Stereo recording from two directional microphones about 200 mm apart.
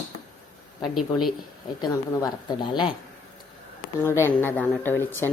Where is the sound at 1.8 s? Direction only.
20° left (ahead or behind).